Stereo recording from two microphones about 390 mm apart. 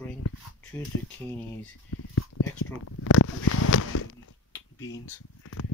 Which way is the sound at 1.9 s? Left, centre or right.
Left.